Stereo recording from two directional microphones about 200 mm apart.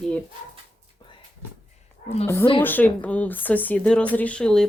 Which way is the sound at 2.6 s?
10° left (ahead or behind).